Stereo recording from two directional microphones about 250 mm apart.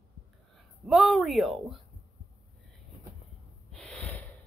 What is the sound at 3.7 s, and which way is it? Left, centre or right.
Gasp, centre.